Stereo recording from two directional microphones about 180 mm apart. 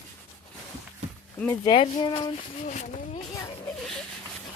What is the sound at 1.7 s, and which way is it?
Speech, 30° left (ahead or behind).